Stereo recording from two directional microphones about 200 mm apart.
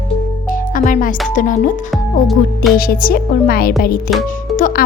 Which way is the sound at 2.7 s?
45° left (ahead or behind).